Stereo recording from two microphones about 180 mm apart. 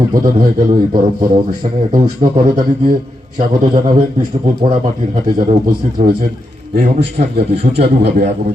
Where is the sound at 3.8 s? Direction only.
35° right (ahead or behind).